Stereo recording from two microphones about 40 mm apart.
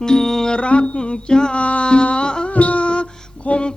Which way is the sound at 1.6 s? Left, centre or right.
Left.